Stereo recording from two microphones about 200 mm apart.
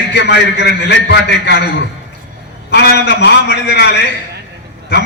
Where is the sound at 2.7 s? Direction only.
55° left (ahead or behind).